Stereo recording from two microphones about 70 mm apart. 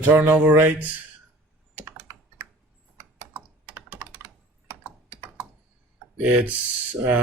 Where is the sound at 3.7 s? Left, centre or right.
Right.